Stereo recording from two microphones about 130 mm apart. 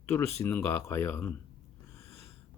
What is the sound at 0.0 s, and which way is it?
Speech, 20° left (ahead or behind).